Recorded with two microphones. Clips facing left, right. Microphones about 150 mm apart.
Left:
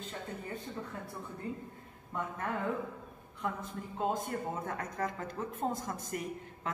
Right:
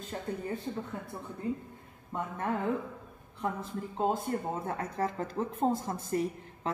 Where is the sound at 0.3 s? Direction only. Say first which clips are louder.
Right 10 dB; 35° right (ahead or behind).